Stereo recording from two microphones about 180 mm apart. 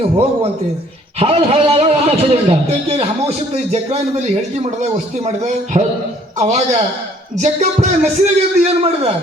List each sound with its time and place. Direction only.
1.2 s a man's voice: 30° right (ahead or behind)
5.7 s a man's voice: 30° right (ahead or behind)